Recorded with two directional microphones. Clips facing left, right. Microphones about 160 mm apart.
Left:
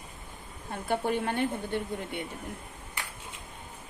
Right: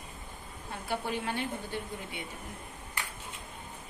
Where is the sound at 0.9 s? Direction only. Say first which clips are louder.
Left 5 dB; 50° left (ahead or behind).